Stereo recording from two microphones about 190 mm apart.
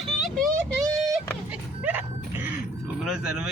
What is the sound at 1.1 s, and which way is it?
Music, 10° right (ahead or behind).